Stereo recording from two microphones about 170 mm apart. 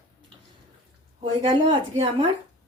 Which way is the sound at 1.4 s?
30° right (ahead or behind).